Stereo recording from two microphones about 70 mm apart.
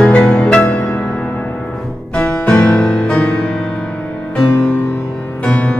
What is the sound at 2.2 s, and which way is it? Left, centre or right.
Music, centre.